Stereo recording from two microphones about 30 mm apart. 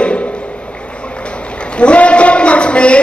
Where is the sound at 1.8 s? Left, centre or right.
Left.